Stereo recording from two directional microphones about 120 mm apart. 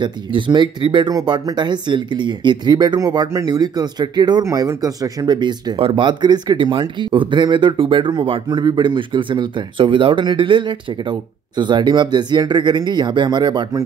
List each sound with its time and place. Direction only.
0.0 s speech: 40° right (ahead or behind)
5.8 s speech: 45° right (ahead or behind)